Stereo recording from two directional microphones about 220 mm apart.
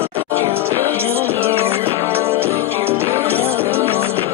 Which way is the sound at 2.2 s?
10° right (ahead or behind).